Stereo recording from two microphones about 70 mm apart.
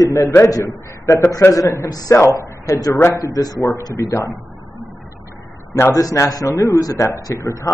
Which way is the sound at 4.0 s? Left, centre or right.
Left.